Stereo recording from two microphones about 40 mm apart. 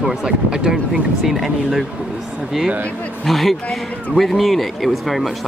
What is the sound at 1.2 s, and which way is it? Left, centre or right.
Speech, centre.